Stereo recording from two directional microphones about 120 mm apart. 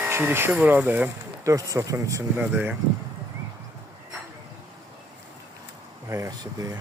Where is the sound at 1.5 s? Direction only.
30° right (ahead or behind).